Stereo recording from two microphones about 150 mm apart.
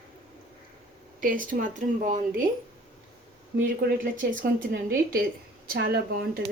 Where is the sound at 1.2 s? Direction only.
65° right (ahead or behind).